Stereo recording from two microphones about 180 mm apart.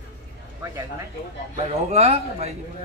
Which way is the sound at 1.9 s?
35° right (ahead or behind).